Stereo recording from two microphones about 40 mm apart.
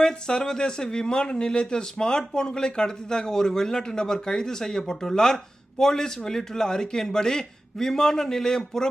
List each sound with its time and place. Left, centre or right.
0.0 s speech: centre